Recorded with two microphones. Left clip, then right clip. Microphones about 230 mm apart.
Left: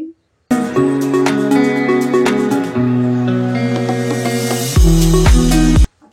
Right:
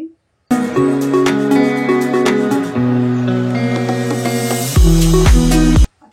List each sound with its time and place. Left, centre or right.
0.5 s music: centre